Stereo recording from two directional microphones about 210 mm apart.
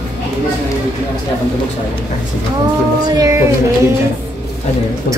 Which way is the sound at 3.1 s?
15° right (ahead or behind).